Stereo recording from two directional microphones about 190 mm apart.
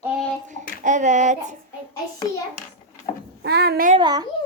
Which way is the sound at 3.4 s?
60° right (ahead or behind).